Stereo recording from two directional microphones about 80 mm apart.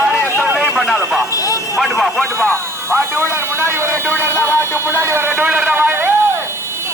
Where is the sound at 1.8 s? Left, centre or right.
Centre.